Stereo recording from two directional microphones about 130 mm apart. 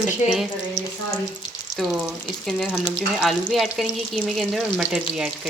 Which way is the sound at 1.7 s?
Centre (ahead or behind).